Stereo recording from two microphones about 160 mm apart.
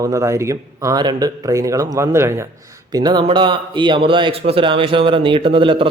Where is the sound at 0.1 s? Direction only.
20° right (ahead or behind).